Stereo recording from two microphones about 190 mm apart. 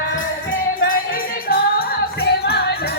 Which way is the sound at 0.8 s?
50° left (ahead or behind).